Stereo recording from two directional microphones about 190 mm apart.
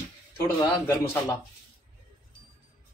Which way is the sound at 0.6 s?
15° left (ahead or behind).